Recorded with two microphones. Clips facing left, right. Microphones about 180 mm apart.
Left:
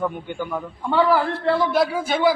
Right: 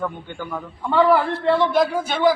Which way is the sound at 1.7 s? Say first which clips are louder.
Right 1 dB; 5° left (ahead or behind).